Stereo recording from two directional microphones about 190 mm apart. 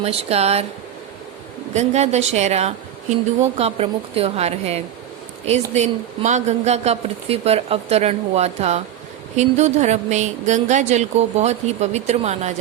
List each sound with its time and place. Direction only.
0.0 s a woman's voice: 35° right (ahead or behind)
1.7 s a woman's voice: 35° right (ahead or behind)